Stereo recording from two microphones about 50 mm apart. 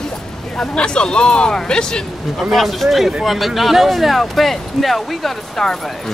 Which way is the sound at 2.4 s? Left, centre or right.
Centre.